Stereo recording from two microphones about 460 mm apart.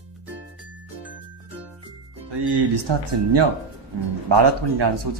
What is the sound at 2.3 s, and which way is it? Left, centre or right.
Speech, right.